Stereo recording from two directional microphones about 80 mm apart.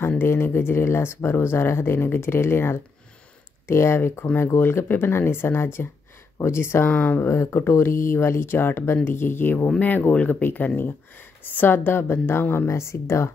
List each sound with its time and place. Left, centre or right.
0.2 s speech: left
6.9 s speech: left